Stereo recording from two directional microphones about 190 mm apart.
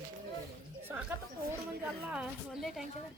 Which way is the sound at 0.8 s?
10° right (ahead or behind).